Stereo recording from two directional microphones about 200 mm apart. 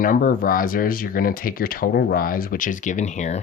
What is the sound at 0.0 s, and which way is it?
Speech, 45° left (ahead or behind).